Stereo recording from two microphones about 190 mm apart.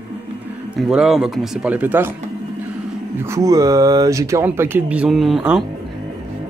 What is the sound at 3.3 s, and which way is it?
Speech, 20° right (ahead or behind).